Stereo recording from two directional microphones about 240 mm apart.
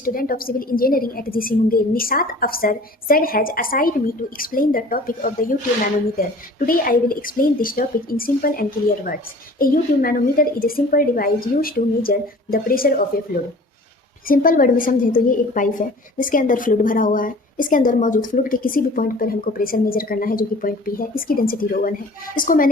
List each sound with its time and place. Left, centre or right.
0.0 s a woman's voice: left
6.7 s a woman's voice: left